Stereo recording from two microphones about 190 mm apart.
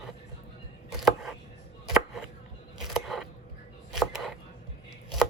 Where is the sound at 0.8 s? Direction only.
Centre (ahead or behind).